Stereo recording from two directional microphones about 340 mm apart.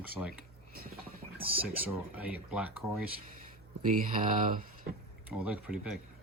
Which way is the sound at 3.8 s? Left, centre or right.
Right.